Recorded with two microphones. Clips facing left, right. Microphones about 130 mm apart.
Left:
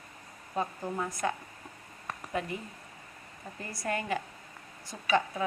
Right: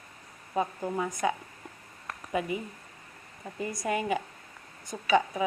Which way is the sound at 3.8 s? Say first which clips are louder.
Right 2 dB; 5° right (ahead or behind).